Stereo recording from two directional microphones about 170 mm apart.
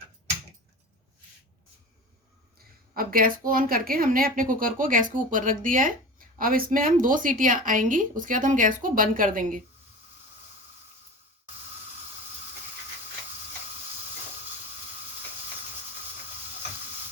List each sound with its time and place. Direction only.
2.9 s a woman's voice: 60° right (ahead or behind)